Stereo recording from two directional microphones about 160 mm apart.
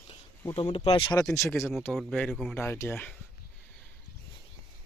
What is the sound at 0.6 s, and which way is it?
Speech, 35° left (ahead or behind).